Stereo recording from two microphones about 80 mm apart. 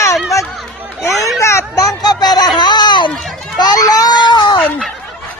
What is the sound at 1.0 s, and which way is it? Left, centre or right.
Chatter, left.